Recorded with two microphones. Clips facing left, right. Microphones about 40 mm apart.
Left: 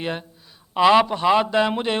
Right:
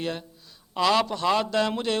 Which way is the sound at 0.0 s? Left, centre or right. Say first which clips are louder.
Left 3 dB; left.